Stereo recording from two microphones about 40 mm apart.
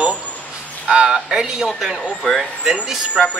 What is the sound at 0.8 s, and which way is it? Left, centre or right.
Speech, right.